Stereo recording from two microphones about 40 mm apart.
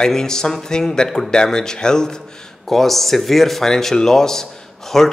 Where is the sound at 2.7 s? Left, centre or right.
Centre.